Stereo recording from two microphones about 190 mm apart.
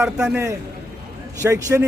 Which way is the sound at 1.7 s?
10° right (ahead or behind).